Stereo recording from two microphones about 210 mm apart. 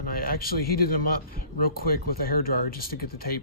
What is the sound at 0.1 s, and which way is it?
A man's voice, 45° left (ahead or behind).